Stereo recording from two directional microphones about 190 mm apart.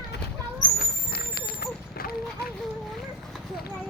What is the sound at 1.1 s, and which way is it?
Horse, 55° left (ahead or behind).